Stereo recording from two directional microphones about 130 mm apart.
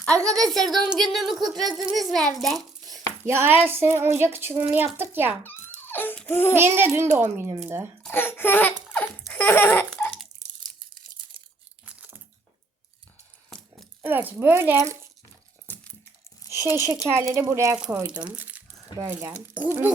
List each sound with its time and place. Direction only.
0.0 s a child's voice: 5° left (ahead or behind)
3.2 s speech: 20° right (ahead or behind)
5.4 s a child's voice: 15° left (ahead or behind)
6.6 s speech: 20° right (ahead or behind)
8.0 s a child's voice: 15° left (ahead or behind)
14.0 s speech: 15° right (ahead or behind)
15.6 s a sound: 10° left (ahead or behind)
16.7 s speech: 20° right (ahead or behind)
18.2 s speech: 10° right (ahead or behind)